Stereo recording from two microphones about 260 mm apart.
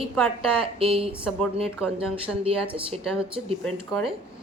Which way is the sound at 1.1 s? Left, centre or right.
Centre.